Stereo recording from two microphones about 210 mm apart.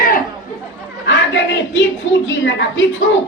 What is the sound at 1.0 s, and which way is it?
Speech, 60° left (ahead or behind).